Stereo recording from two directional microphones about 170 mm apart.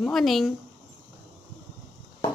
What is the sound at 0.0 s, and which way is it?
Speech, centre (ahead or behind).